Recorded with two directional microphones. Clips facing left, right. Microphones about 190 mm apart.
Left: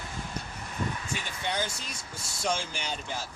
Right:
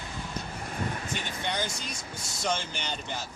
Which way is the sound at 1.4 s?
5° left (ahead or behind).